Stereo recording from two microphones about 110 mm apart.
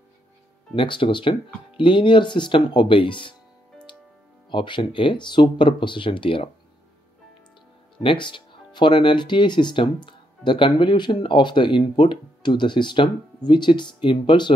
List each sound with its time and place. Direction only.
0.7 s speech: 50° left (ahead or behind)
4.5 s speech: 45° left (ahead or behind)
8.0 s speech: 50° left (ahead or behind)